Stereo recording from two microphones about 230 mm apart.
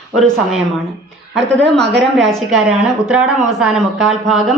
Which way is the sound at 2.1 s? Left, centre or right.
Centre.